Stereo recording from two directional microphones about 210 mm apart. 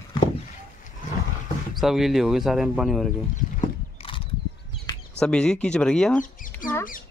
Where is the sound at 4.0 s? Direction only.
25° left (ahead or behind).